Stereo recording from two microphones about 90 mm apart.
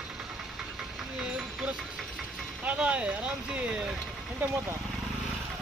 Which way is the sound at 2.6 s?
15° right (ahead or behind).